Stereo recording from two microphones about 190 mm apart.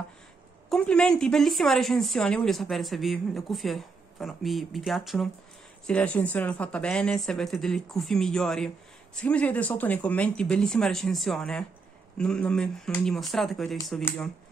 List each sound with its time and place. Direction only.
0.7 s speech: 5° left (ahead or behind)